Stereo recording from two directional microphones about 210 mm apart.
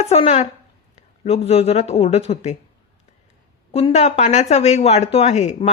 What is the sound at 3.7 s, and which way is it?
Speech, 30° left (ahead or behind).